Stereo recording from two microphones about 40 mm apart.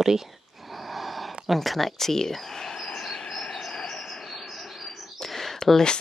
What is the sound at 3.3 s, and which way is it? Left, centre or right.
Cricket, left.